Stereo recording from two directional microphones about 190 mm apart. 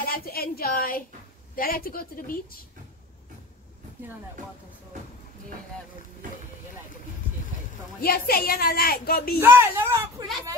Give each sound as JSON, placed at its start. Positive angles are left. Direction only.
{"t": 0.1, "sound": "speech", "side_deg": 50}
{"t": 8.0, "sound": "speech", "side_deg": 50}
{"t": 9.4, "sound": "speech", "side_deg": -10}